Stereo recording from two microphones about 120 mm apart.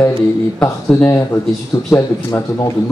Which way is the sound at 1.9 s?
25° left (ahead or behind).